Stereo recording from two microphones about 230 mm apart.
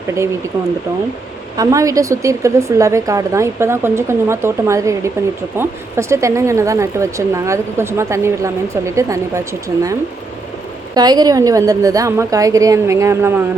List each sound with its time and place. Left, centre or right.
0.1 s speech: centre
1.5 s speech: centre